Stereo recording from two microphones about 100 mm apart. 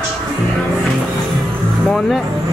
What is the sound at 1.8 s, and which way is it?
Vehicle, 5° left (ahead or behind).